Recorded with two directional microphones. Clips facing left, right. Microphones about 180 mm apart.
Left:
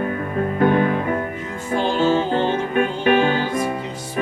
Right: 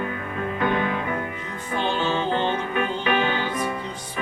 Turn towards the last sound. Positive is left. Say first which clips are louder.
# left 5 dB
turn(degrees=45)  # may be behind; listen again after turning